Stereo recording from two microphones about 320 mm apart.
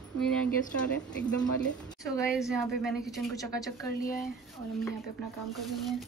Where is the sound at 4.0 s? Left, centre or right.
Left.